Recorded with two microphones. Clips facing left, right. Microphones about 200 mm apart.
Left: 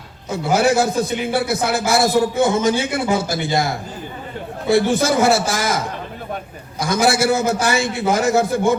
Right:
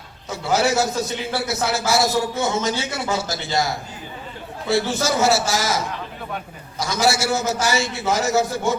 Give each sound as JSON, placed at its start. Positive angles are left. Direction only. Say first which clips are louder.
{"t": 0.5, "sound": "a man's voice", "louder": "left 3 dB", "side_deg": 55}
{"t": 4.7, "sound": "a man's voice", "louder": "left 5 dB", "side_deg": 55}